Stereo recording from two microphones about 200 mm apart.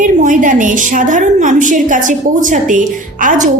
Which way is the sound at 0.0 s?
40° right (ahead or behind).